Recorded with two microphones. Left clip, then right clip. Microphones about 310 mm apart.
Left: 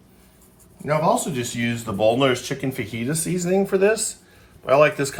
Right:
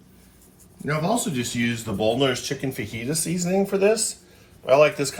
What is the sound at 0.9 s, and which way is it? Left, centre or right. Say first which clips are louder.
Speech: left 5 dB; left.